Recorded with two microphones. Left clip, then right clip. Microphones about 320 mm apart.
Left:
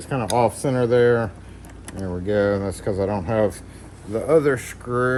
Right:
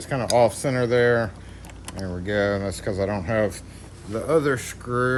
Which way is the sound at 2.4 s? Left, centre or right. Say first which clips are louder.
Left 3 dB; centre.